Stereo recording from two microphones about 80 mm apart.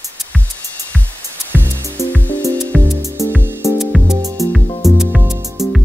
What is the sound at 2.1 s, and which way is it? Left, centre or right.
Music, left.